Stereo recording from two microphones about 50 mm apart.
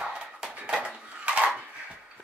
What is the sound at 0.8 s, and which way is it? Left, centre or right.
Dishes, right.